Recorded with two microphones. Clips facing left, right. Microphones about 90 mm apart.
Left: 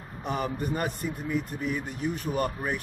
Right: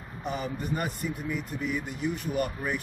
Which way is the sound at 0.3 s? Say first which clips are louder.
Left 2 dB; 50° left (ahead or behind).